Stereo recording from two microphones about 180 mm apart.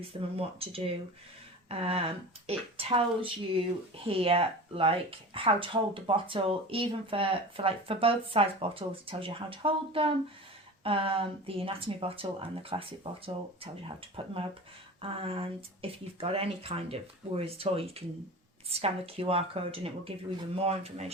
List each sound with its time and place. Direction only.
0.1 s speech: 30° right (ahead or behind)